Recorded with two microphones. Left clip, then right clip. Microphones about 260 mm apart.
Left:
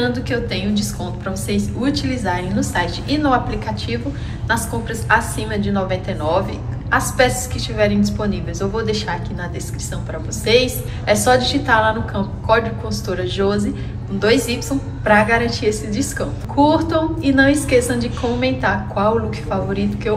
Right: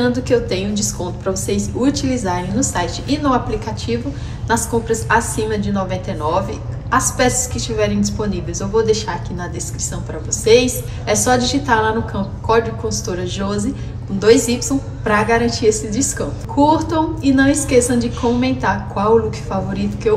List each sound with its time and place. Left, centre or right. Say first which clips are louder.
0.0 s a woman's voice: right 4 dB; centre